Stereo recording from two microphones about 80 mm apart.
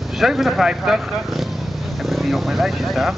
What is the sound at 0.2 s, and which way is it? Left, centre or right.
Speech, centre.